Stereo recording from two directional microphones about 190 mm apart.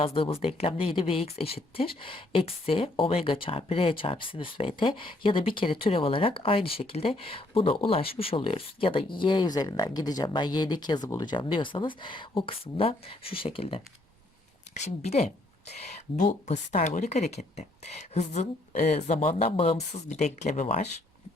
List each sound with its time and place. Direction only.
0.0 s speech: 30° left (ahead or behind)